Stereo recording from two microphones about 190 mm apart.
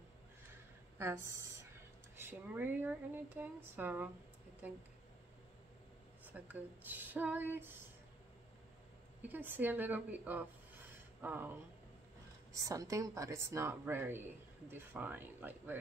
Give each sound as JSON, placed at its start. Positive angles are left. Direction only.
{"t": 0.9, "sound": "speech", "side_deg": -10}
{"t": 6.2, "sound": "speech", "side_deg": -10}
{"t": 9.3, "sound": "speech", "side_deg": -10}
{"t": 12.5, "sound": "speech", "side_deg": -15}